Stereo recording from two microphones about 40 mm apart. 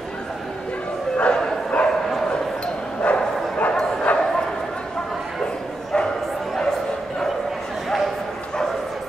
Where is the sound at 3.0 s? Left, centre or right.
Left.